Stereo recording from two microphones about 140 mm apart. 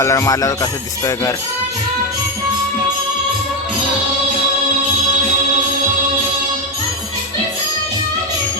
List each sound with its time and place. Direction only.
0.0 s speech: 20° left (ahead or behind)